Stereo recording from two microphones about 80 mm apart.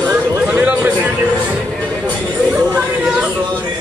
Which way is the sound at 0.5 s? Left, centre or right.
Centre.